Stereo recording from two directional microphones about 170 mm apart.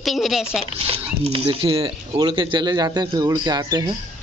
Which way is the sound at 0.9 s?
35° right (ahead or behind).